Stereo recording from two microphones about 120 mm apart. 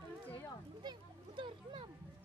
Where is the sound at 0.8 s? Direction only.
40° right (ahead or behind).